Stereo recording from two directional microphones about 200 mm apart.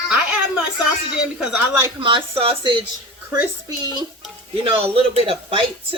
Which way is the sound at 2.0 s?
25° right (ahead or behind).